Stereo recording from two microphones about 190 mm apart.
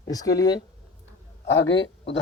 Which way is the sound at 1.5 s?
70° left (ahead or behind).